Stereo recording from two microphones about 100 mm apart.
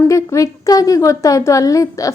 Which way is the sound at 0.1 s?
30° left (ahead or behind).